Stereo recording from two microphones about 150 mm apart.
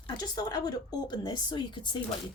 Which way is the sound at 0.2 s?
25° left (ahead or behind).